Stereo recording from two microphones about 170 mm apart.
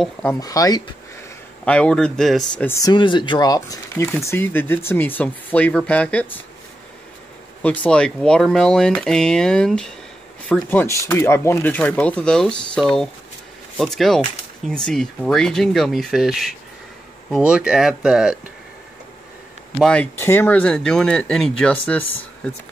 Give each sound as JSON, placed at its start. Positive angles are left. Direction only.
{"t": 0.0, "sound": "speech", "side_deg": 5}
{"t": 0.4, "sound": "speech", "side_deg": 20}
{"t": 1.6, "sound": "speech", "side_deg": 5}
{"t": 2.9, "sound": "speech", "side_deg": 25}
{"t": 7.6, "sound": "speech", "side_deg": 10}
{"t": 19.8, "sound": "speech", "side_deg": 5}